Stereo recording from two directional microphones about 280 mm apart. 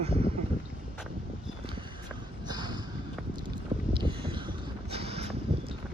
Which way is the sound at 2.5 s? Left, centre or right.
Centre.